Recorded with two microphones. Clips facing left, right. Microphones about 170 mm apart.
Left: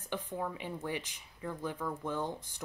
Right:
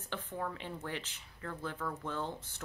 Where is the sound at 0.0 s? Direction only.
10° left (ahead or behind).